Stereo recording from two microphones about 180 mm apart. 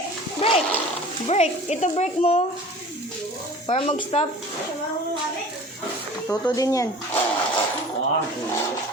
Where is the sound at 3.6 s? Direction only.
30° left (ahead or behind).